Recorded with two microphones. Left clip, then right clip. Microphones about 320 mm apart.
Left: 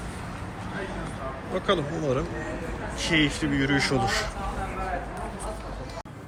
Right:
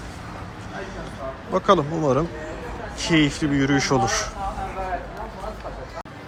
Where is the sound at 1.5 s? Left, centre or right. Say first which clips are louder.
Right 8 dB; right.